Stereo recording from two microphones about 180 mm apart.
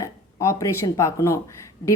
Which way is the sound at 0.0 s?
15° left (ahead or behind).